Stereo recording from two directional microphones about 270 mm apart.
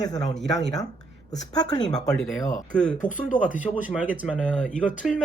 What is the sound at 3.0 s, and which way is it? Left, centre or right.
Speech, left.